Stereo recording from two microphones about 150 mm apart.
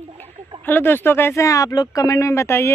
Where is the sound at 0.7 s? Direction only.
15° left (ahead or behind).